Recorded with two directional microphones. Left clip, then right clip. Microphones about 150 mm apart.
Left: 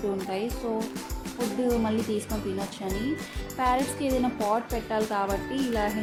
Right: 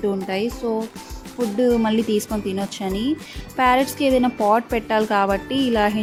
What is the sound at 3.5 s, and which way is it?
Speech, 45° right (ahead or behind).